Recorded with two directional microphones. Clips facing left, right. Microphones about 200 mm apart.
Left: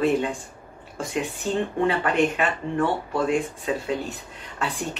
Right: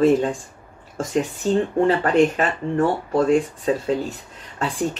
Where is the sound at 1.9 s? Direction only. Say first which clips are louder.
Right 5 dB; 40° right (ahead or behind).